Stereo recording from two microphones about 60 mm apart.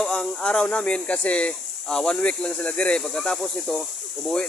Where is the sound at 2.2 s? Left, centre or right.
Centre.